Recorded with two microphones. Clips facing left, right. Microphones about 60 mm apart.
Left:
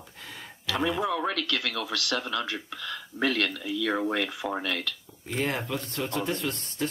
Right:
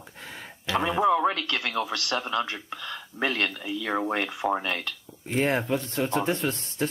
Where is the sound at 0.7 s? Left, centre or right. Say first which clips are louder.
Right 5 dB; right.